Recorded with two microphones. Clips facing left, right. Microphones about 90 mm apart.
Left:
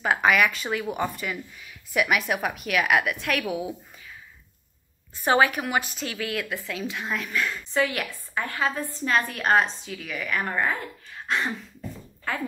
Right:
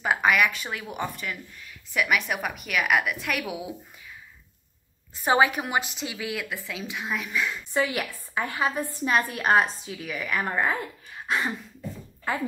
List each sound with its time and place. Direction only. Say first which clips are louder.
0.0 s speech: left 1 dB; centre (ahead or behind)
5.2 s a woman's voice: left 1 dB; 15° right (ahead or behind)
11.2 s beatboxing: even; 5° right (ahead or behind)